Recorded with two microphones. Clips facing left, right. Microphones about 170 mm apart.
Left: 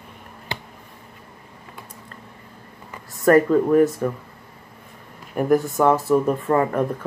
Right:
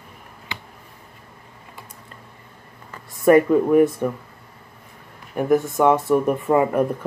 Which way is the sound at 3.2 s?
10° right (ahead or behind).